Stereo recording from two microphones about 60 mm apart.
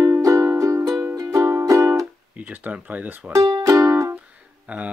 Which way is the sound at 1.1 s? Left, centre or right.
Right.